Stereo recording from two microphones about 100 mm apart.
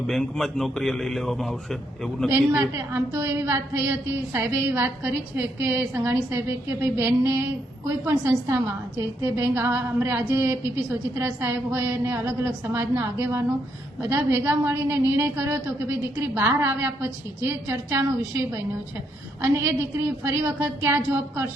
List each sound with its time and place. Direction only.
0.1 s a man's voice: 5° left (ahead or behind)
2.3 s a woman's voice: 25° right (ahead or behind)
20.2 s a woman's voice: 30° right (ahead or behind)